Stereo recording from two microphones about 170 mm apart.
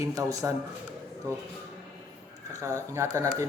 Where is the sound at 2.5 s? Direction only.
20° right (ahead or behind).